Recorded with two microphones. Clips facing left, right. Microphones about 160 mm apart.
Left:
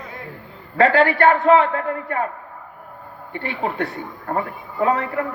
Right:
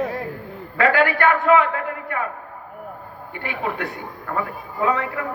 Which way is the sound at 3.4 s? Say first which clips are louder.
Left 2 dB; 30° left (ahead or behind).